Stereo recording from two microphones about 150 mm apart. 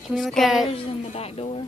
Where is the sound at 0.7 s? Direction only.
40° left (ahead or behind).